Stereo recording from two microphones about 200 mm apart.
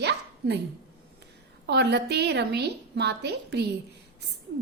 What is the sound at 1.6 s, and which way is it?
A woman's voice, 55° right (ahead or behind).